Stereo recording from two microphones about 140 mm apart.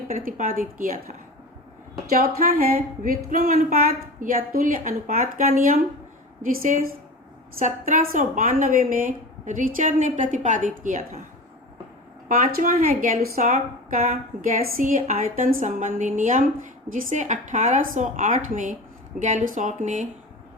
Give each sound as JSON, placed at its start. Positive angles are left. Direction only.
{"t": 0.1, "sound": "a woman's voice", "side_deg": -75}
{"t": 2.0, "sound": "a woman's voice", "side_deg": -90}
{"t": 3.2, "sound": "a woman's voice", "side_deg": -75}
{"t": 12.3, "sound": "a woman's voice", "side_deg": -80}